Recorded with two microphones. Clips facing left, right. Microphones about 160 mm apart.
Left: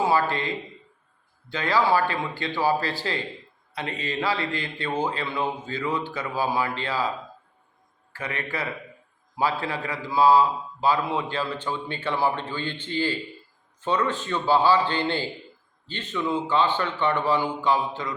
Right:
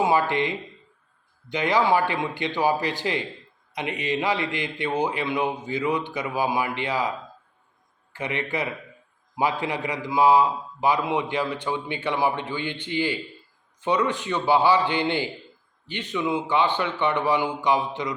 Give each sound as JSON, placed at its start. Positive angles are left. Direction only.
{"t": 0.0, "sound": "a man's voice", "side_deg": -20}
{"t": 8.1, "sound": "a man's voice", "side_deg": -20}